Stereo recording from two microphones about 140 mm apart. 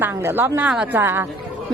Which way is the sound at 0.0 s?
15° right (ahead or behind).